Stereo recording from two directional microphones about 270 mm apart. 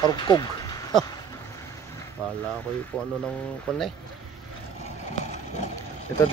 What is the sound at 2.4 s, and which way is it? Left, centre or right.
Speech, centre.